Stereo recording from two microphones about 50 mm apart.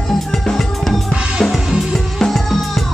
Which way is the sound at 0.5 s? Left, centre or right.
Centre.